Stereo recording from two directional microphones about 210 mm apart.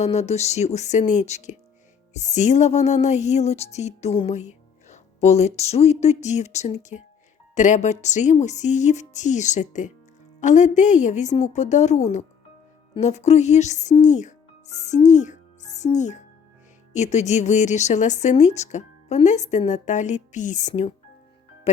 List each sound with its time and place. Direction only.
0.0 s music: 30° left (ahead or behind)
12.9 s speech: 35° left (ahead or behind)
16.9 s music: 35° left (ahead or behind)